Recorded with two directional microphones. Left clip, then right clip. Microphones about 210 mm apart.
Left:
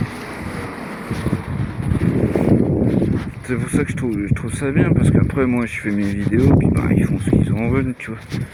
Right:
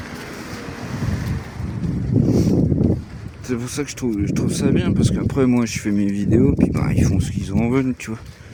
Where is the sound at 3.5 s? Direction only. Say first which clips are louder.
Left 3 dB; 40° right (ahead or behind).